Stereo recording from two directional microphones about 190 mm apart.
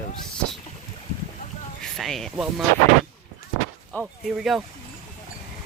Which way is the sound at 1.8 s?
Centre (ahead or behind).